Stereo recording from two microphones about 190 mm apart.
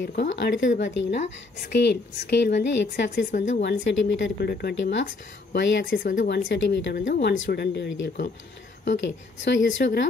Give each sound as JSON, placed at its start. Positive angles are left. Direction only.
{"t": 0.0, "sound": "a woman's voice", "side_deg": 65}
{"t": 5.9, "sound": "speech", "side_deg": 45}
{"t": 6.2, "sound": "a woman's voice", "side_deg": 60}